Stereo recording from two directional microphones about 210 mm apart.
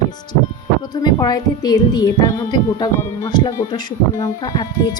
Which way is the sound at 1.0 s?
20° left (ahead or behind).